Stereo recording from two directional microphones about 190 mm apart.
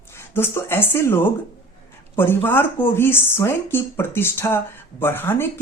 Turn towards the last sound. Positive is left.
turn(degrees=10)  # may be behind; listen again after turning